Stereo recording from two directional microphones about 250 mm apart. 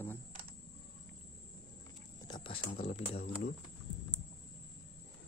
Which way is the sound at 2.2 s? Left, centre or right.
Centre.